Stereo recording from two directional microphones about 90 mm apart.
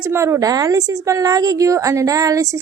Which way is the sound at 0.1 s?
30° right (ahead or behind).